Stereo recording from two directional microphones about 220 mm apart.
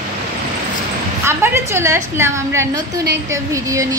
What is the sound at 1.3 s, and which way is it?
A woman's voice, 10° right (ahead or behind).